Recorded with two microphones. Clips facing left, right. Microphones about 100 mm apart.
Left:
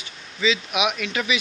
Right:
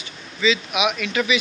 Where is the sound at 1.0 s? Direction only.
35° left (ahead or behind).